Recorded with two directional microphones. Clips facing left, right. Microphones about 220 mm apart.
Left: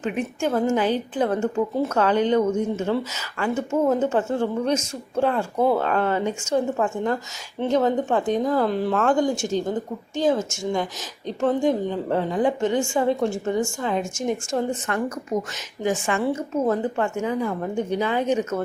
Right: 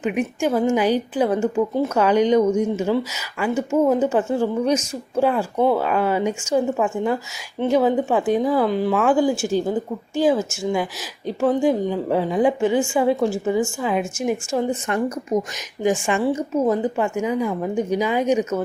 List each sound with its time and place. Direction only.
0.0 s a woman's voice: 15° right (ahead or behind)
5.8 s a woman's voice: 10° right (ahead or behind)
15.3 s a woman's voice: 20° right (ahead or behind)